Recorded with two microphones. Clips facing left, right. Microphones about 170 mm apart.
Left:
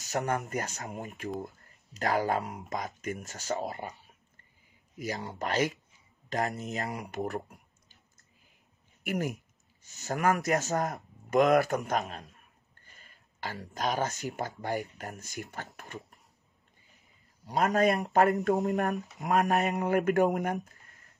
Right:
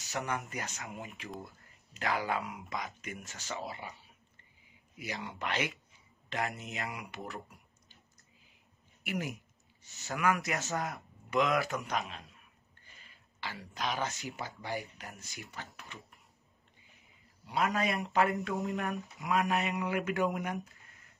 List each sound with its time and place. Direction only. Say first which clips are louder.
0.0 s speech: left 6 dB; 40° left (ahead or behind)
4.9 s speech: left 5 dB; 40° left (ahead or behind)
9.0 s speech: left 5 dB; 45° left (ahead or behind)
17.5 s speech: left 6 dB; 45° left (ahead or behind)